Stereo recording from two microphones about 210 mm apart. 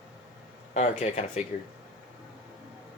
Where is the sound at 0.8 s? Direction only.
30° left (ahead or behind).